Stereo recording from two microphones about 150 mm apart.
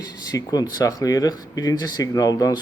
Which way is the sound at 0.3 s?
25° left (ahead or behind).